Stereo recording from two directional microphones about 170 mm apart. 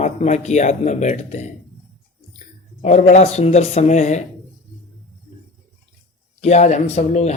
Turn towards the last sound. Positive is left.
turn(degrees=40)  # may be behind; listen again after turning